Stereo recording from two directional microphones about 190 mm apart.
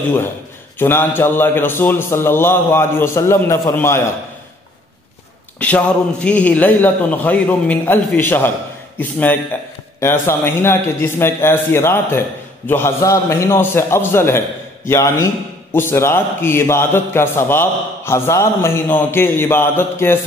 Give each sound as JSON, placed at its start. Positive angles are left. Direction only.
{"t": 0.7, "sound": "a man's voice", "side_deg": 10}
{"t": 5.6, "sound": "a man's voice", "side_deg": 5}